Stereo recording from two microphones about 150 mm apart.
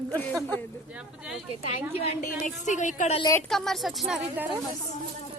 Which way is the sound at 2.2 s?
55° left (ahead or behind).